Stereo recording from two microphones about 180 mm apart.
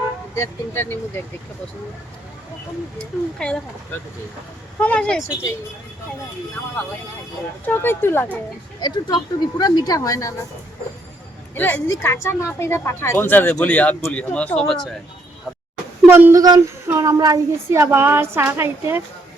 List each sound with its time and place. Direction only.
0.3 s speech: 15° left (ahead or behind)
3.0 s speech: 5° left (ahead or behind)
4.8 s speech: 5° left (ahead or behind)
7.6 s speech: 10° left (ahead or behind)
8.8 s a woman's voice: 25° left (ahead or behind)
11.5 s speech: 10° left (ahead or behind)
16.0 s speech: 10° right (ahead or behind)